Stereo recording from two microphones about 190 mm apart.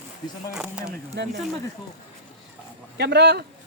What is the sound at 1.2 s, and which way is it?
Speech, 60° right (ahead or behind).